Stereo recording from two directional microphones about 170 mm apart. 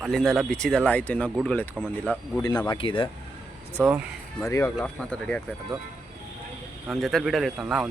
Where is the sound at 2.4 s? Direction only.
25° left (ahead or behind).